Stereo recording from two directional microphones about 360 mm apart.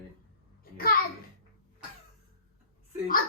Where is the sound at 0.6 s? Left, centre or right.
Left.